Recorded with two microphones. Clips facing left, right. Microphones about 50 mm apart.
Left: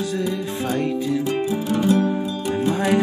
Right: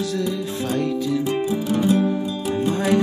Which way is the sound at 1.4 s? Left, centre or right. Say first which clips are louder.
Even; centre.